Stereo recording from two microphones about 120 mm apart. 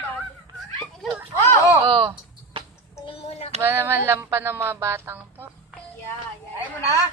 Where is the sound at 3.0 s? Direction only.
55° left (ahead or behind).